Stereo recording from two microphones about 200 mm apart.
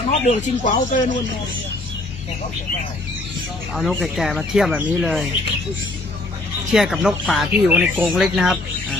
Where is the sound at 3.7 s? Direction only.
Centre (ahead or behind).